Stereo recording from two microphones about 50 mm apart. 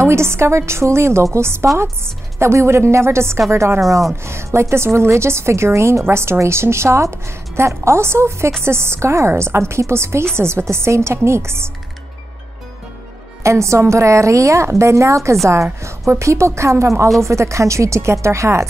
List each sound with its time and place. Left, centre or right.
0.0 s a woman's voice: right
13.4 s a woman's voice: right
15.4 s a woman's voice: right